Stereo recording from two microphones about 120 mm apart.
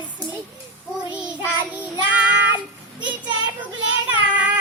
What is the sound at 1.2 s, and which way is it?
Child singing, 10° right (ahead or behind).